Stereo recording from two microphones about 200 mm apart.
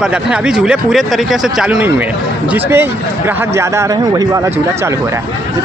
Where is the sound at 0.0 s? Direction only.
5° right (ahead or behind).